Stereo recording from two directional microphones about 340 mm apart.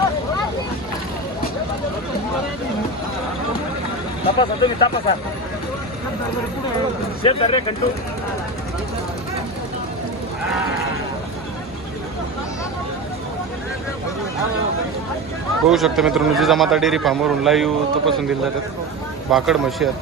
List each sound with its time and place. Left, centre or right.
4.4 s speech: centre
7.2 s speech: centre
15.7 s a man's voice: centre